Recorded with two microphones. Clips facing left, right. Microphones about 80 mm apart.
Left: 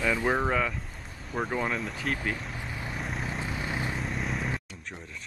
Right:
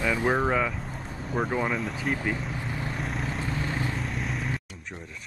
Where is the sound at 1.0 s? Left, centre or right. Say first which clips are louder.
Right 7 dB; right.